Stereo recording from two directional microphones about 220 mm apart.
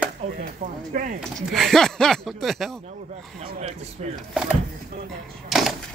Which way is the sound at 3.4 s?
25° right (ahead or behind).